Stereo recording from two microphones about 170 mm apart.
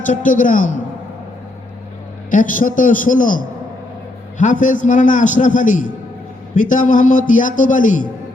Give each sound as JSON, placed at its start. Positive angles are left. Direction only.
{"t": 0.0, "sound": "a man's voice", "side_deg": 50}
{"t": 2.3, "sound": "a man's voice", "side_deg": 50}